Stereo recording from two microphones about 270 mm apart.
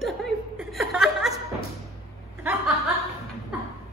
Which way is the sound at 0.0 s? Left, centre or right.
Centre.